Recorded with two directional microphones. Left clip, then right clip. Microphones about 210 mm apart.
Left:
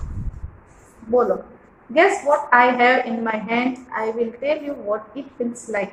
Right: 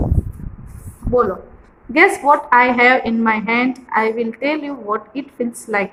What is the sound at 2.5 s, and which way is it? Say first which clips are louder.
A woman's voice: right 1 dB; 50° right (ahead or behind).